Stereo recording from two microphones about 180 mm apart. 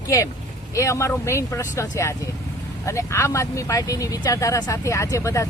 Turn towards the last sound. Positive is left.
turn(degrees=15)  # may be behind; listen again after turning